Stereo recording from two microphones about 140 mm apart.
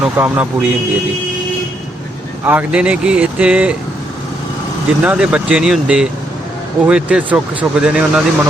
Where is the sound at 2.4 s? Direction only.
10° right (ahead or behind).